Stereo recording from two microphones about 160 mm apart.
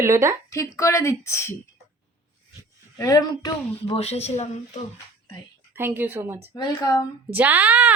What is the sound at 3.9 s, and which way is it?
Speech, 40° left (ahead or behind).